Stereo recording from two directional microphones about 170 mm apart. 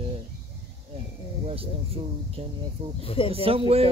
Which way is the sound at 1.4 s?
35° right (ahead or behind).